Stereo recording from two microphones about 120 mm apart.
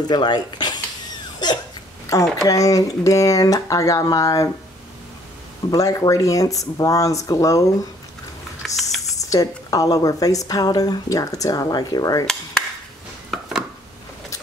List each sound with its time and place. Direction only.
0.1 s speech: 35° left (ahead or behind)
1.4 s hiccup: 35° left (ahead or behind)
2.1 s a woman's voice: 30° left (ahead or behind)
5.7 s a woman's voice: 30° left (ahead or behind)
8.6 s a sound: centre (ahead or behind)
9.2 s a woman's voice: 30° left (ahead or behind)
13.3 s a sound: 5° right (ahead or behind)